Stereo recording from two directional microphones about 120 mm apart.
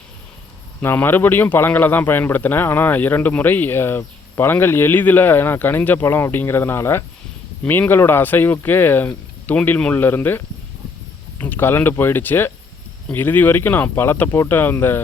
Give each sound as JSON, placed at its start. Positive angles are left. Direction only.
{"t": 0.8, "sound": "speech", "side_deg": 20}